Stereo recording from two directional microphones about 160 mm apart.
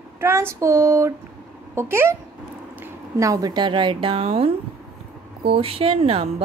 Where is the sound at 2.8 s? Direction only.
20° right (ahead or behind).